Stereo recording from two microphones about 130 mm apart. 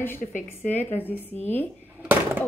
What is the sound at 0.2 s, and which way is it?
Speech, 80° left.